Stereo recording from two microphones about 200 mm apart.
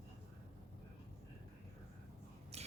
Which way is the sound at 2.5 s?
30° right (ahead or behind).